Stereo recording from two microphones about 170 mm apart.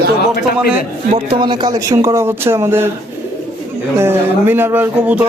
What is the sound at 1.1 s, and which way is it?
Speech, 30° right (ahead or behind).